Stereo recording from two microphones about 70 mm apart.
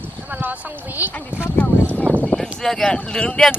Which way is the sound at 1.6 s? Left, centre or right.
Centre.